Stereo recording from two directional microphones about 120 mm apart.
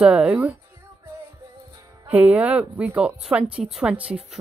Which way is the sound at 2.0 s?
15° right (ahead or behind).